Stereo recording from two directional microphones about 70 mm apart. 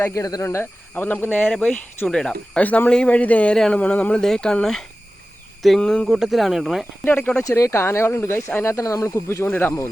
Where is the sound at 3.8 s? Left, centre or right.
Centre.